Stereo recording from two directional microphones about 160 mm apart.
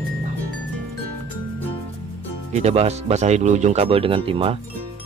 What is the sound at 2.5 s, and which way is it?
Speech, 40° right (ahead or behind).